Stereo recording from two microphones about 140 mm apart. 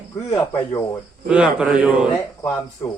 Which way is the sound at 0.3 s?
30° left (ahead or behind).